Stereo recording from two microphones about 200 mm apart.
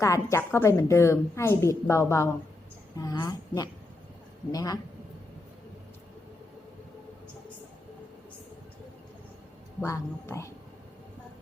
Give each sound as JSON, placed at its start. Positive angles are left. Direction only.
{"t": 0.0, "sound": "a woman's voice", "side_deg": 15}
{"t": 9.8, "sound": "a woman's voice", "side_deg": 15}